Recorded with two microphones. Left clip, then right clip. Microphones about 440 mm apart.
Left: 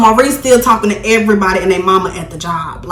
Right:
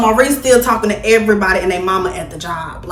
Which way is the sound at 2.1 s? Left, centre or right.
Centre.